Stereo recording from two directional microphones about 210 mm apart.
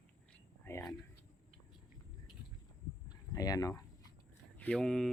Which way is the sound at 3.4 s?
15° left (ahead or behind).